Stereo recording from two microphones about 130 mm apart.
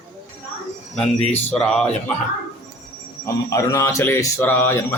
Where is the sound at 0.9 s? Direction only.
5° left (ahead or behind).